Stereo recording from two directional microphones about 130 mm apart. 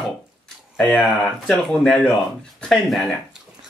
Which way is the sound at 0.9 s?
Centre (ahead or behind).